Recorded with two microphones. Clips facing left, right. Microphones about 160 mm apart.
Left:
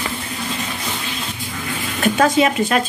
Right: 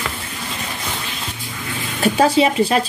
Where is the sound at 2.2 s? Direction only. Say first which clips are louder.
Right 1 dB; 30° right (ahead or behind).